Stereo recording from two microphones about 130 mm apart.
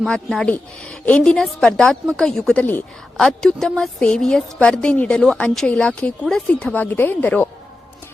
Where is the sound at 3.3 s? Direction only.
5° left (ahead or behind).